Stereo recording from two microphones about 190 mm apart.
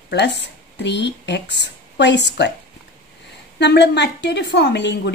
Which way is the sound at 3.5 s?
65° left (ahead or behind).